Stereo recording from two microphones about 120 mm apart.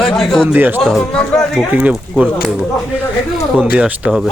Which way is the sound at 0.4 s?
15° right (ahead or behind).